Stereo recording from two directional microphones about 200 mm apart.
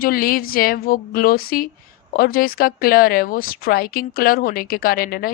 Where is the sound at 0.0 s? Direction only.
45° left (ahead or behind).